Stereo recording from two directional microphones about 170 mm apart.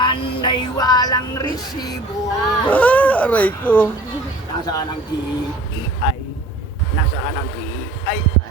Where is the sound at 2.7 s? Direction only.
10° left (ahead or behind).